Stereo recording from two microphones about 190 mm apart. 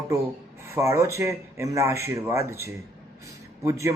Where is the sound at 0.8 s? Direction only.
15° right (ahead or behind).